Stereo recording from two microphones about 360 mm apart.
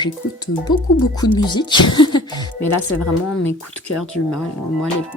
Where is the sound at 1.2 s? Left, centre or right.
Centre.